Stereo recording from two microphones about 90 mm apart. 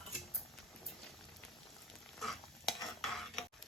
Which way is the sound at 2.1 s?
Centre (ahead or behind).